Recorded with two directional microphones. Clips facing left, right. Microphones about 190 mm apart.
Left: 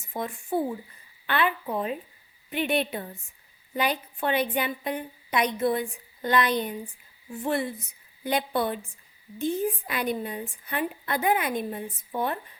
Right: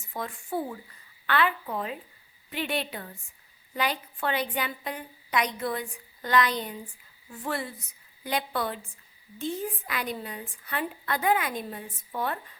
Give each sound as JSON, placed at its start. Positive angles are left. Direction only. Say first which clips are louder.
{"t": 0.1, "sound": "a woman's voice", "louder": "left 4 dB", "side_deg": 20}